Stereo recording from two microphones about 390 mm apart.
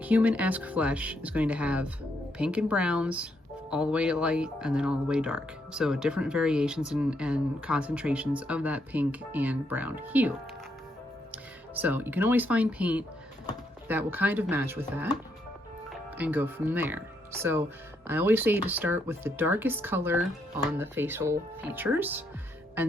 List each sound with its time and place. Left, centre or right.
0.0 s speech: centre
16.1 s speech: centre
18.1 s speech: centre